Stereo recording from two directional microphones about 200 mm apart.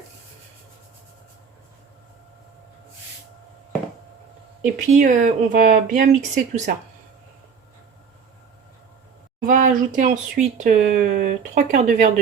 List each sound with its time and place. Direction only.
4.6 s speech: 40° right (ahead or behind)
9.5 s speech: 40° right (ahead or behind)